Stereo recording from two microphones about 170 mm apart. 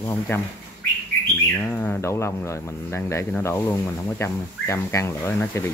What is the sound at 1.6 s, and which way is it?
Speech, 5° left (ahead or behind).